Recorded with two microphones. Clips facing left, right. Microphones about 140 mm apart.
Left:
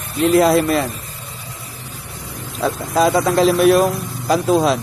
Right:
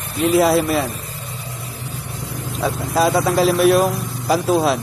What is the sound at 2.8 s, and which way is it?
A man's voice, centre (ahead or behind).